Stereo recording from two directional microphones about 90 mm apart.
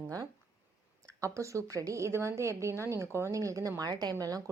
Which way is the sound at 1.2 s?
35° right (ahead or behind).